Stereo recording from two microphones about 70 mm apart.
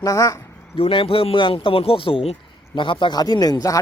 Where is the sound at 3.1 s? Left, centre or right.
Left.